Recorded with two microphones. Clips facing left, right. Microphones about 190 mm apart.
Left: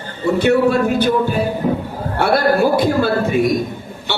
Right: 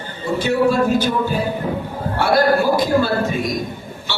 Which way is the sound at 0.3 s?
60° left (ahead or behind).